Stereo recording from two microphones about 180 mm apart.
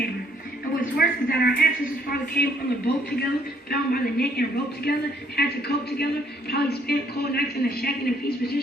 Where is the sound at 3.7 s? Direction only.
60° left (ahead or behind).